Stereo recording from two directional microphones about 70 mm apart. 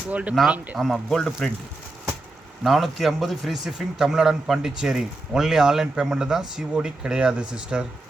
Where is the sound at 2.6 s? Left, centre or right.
Centre.